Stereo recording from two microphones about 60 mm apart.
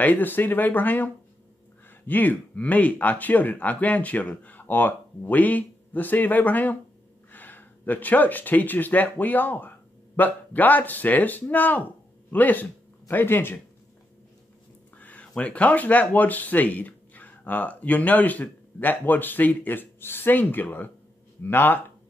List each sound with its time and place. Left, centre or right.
0.0 s speech: left
15.0 s speech: left